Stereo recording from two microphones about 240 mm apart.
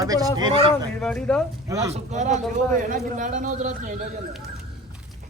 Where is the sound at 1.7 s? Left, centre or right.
Centre.